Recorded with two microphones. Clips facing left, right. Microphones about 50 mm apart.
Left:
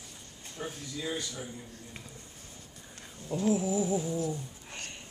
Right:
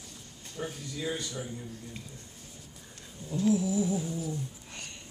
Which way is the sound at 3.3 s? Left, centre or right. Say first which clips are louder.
Right 1 dB; left.